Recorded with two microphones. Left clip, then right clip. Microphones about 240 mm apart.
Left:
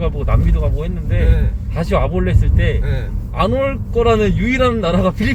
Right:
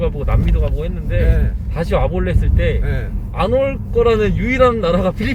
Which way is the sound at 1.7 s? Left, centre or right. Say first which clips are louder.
Even; centre.